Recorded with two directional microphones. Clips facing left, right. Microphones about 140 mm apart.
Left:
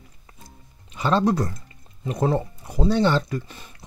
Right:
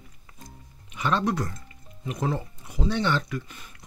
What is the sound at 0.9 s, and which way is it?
Speech, 30° left (ahead or behind).